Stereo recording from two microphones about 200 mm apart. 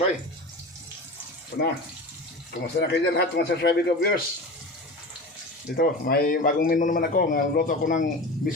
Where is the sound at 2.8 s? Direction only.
55° left (ahead or behind).